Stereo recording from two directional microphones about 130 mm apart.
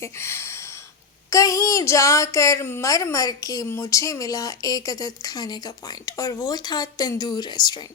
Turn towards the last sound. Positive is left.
turn(degrees=35)  # may be behind; listen again after turning